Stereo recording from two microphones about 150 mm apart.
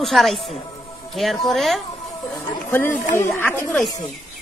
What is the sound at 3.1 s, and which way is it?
Speech, 15° left (ahead or behind).